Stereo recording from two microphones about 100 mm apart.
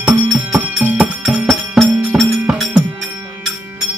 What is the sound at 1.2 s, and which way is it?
Music, 5° right (ahead or behind).